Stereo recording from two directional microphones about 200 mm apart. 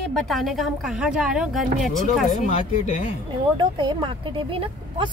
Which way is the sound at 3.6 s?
25° right (ahead or behind).